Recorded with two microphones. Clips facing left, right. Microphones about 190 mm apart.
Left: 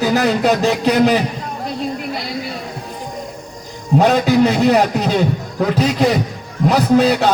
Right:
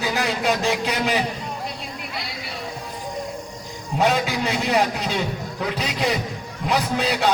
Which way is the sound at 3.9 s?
40° left (ahead or behind).